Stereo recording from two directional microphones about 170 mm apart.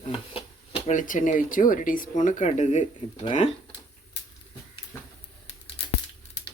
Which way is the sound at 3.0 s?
30° left (ahead or behind).